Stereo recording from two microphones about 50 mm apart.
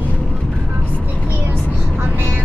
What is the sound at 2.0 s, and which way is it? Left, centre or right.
Vehicle, right.